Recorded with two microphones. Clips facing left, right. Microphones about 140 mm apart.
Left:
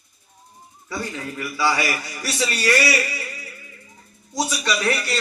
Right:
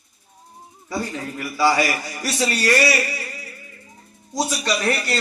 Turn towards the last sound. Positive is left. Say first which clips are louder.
# right 1 dB
turn(degrees=-30)  # may be behind; listen again after turning